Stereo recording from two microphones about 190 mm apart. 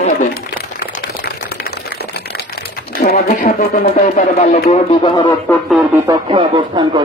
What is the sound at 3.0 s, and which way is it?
Speech, 50° left (ahead or behind).